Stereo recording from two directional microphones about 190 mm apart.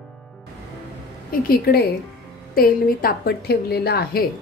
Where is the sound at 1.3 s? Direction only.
55° left (ahead or behind).